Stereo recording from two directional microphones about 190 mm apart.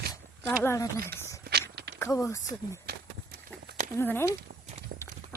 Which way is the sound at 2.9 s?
55° right (ahead or behind).